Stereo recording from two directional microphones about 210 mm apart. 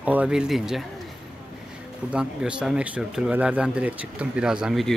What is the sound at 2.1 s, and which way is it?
Speech, 5° right (ahead or behind).